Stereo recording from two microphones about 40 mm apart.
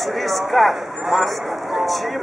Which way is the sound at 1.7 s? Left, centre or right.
Centre.